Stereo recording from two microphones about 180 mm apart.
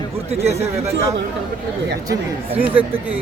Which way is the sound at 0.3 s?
35° right (ahead or behind).